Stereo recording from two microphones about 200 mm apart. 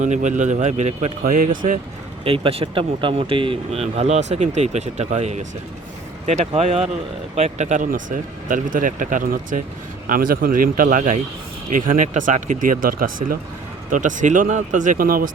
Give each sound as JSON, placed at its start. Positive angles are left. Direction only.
{"t": 0.0, "sound": "speech", "side_deg": -35}
{"t": 2.2, "sound": "speech", "side_deg": -25}